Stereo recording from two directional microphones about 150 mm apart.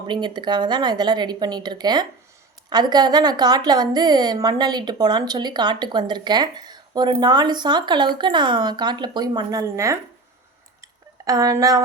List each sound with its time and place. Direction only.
0.1 s a woman's voice: 30° right (ahead or behind)
11.3 s a woman's voice: 20° right (ahead or behind)